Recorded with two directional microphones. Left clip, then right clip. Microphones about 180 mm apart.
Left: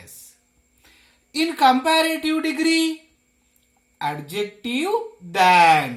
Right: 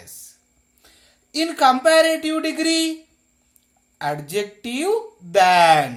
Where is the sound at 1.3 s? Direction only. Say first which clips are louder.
Even; 45° right (ahead or behind).